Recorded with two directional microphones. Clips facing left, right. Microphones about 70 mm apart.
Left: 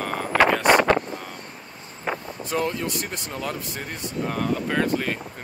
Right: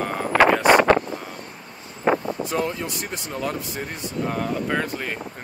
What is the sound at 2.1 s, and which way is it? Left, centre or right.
Vehicle, right.